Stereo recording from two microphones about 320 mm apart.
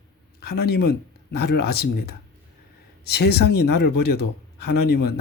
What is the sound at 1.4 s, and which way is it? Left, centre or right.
Speech, left.